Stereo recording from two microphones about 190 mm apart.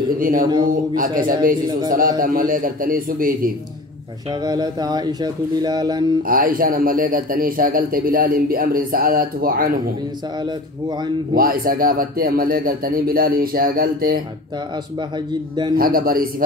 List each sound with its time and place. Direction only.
0.2 s a man's voice: 45° right (ahead or behind)
4.3 s speech: 20° right (ahead or behind)
6.2 s a man's voice: 50° right (ahead or behind)
10.4 s speech: 25° right (ahead or behind)
11.3 s a man's voice: 50° right (ahead or behind)
15.0 s speech: 25° right (ahead or behind)
15.7 s a man's voice: 50° right (ahead or behind)